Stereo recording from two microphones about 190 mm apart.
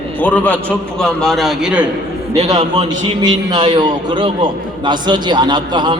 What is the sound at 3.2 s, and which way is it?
A man's voice, 25° right (ahead or behind).